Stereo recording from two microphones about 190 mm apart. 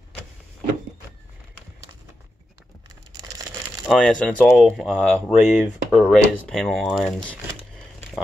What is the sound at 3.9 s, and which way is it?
Speech, 5° left (ahead or behind).